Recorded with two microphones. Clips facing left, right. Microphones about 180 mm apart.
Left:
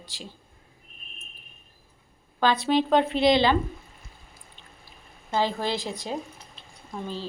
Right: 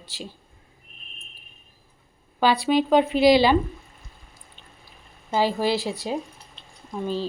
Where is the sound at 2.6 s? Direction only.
5° right (ahead or behind).